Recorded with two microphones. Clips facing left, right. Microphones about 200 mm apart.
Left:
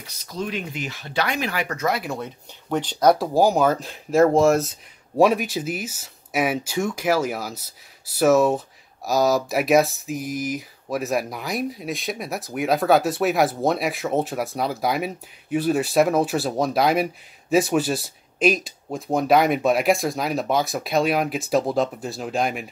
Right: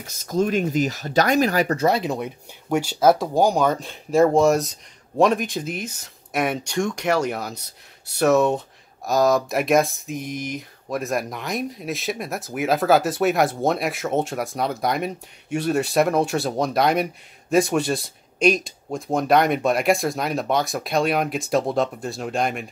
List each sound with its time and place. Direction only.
0.0 s speech: 45° right (ahead or behind); by 2.0 s 30° right (ahead or behind)
2.0 s speech: 15° right (ahead or behind); by 22.7 s centre (ahead or behind)